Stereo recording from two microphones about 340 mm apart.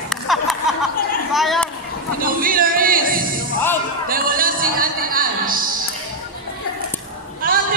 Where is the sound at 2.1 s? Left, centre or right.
Right.